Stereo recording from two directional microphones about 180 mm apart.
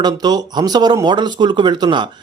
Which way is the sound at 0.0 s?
20° right (ahead or behind).